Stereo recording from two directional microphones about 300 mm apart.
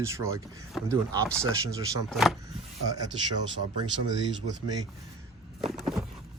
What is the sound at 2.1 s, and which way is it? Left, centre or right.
Speech, centre.